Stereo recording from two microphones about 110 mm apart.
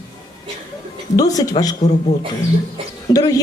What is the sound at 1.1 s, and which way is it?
Speech, 35° left (ahead or behind).